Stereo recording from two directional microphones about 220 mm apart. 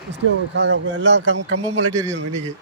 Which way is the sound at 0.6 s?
55° right (ahead or behind).